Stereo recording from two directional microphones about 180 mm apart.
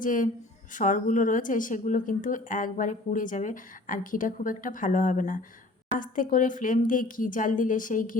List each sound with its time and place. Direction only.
0.0 s a woman's voice: 45° left (ahead or behind)